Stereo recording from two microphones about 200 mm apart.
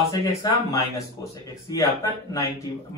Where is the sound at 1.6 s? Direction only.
15° left (ahead or behind).